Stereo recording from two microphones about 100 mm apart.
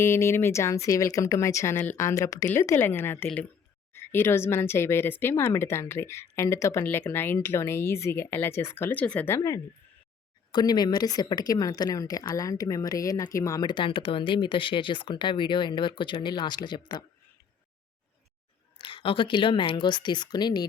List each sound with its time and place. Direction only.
0.0 s speech: 25° left (ahead or behind)
9.3 s speech: 35° left (ahead or behind)
10.5 s speech: 45° left (ahead or behind)
13.7 s speech: 55° left (ahead or behind)
18.8 s speech: 55° left (ahead or behind)